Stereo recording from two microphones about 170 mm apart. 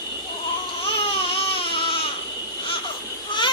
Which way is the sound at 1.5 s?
30° left (ahead or behind).